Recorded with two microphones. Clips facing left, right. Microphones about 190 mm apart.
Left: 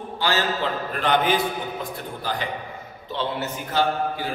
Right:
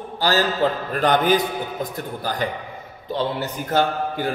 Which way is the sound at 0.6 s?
40° right (ahead or behind).